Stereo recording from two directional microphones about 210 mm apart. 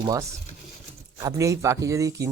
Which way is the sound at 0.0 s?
15° right (ahead or behind).